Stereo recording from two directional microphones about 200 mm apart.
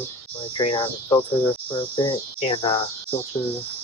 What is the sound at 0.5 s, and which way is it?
Cricket, 25° left (ahead or behind).